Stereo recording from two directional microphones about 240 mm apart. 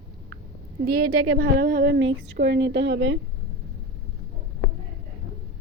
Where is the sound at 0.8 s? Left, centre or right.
Right.